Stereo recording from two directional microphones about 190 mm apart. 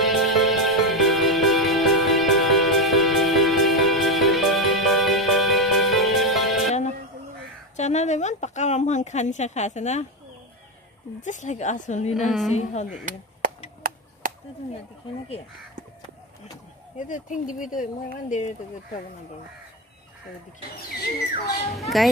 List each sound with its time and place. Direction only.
0.0 s music: centre (ahead or behind)
7.7 s a sound: 35° left (ahead or behind)
11.1 s speech: 40° left (ahead or behind)
12.1 s a woman's voice: centre (ahead or behind)
13.8 s chop: 50° right (ahead or behind)
16.9 s speech: 45° left (ahead or behind)
21.0 s speech: 55° left (ahead or behind)
21.7 s a woman's voice: centre (ahead or behind)